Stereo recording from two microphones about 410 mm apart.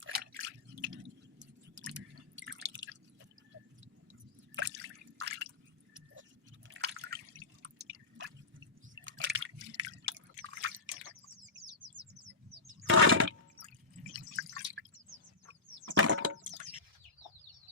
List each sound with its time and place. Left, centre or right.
0.0 s drip: right
1.4 s chewing: right
2.3 s drip: right
4.5 s drip: right
6.7 s drip: right
9.0 s drip: right
11.1 s bird: right
12.6 s a sound: right
14.0 s drip: centre
15.9 s splinter: right